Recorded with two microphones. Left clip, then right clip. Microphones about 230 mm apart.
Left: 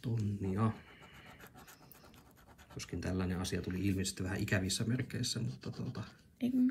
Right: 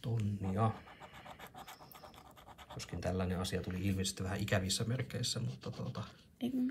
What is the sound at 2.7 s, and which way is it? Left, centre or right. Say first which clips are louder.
Speech: right 1 dB; centre.